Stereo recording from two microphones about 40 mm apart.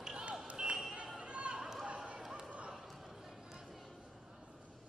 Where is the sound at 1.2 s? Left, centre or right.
Right.